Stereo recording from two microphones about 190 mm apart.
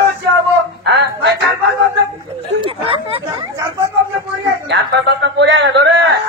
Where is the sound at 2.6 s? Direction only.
30° right (ahead or behind).